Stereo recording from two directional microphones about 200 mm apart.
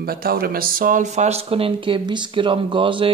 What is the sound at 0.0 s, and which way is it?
Speech, 50° right (ahead or behind).